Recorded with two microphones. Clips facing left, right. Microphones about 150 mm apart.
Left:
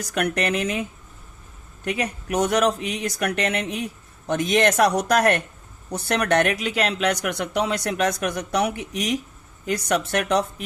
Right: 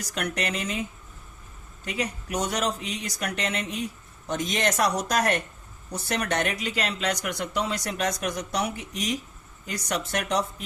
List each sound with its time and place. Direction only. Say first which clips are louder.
0.0 s speech: left 6 dB; 55° left (ahead or behind)
1.8 s speech: left 4 dB; 60° left (ahead or behind)